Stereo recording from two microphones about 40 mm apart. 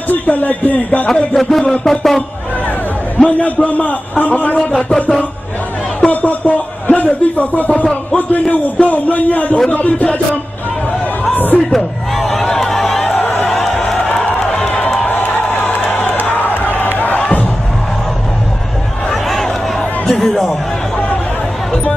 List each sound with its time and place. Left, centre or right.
0.1 s a man's voice: left
1.3 s speech: centre
3.2 s a man's voice: left
4.6 s music: left
6.2 s a man's voice: left
9.7 s music: left
11.3 s music: left
11.7 s speech: centre
12.6 s a sound: centre
13.0 s a sound: left
13.5 s music: centre
15.5 s a sound: left
19.2 s a sound: centre